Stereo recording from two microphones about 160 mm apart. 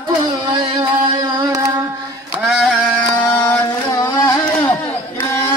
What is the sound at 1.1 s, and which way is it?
Music, 25° right (ahead or behind).